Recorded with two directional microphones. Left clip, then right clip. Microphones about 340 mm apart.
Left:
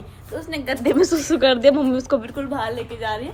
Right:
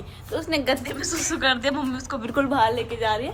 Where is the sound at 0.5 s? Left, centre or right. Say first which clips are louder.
Right 3 dB; centre.